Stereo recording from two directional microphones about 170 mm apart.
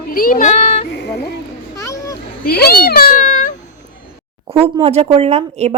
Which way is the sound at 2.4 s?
65° left (ahead or behind).